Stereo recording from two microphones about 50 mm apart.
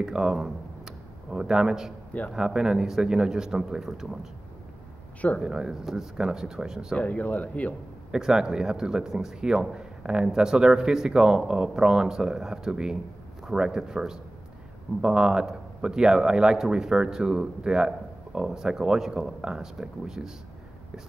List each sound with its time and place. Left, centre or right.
0.0 s speech: centre
5.4 s speech: centre
7.0 s speech: left
8.1 s speech: centre